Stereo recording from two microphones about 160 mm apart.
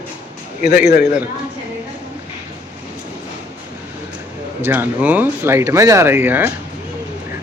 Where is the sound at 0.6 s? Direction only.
55° left (ahead or behind).